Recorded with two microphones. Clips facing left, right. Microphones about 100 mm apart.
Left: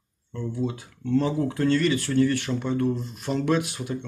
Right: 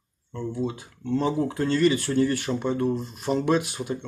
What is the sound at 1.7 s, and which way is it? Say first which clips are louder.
Speech: right 3 dB; 30° right (ahead or behind).